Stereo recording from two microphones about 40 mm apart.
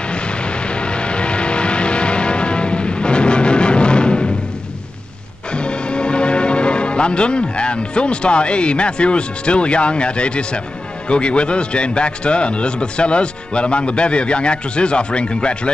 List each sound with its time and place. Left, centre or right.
0.1 s vehicle: left
5.5 s a man's voice: left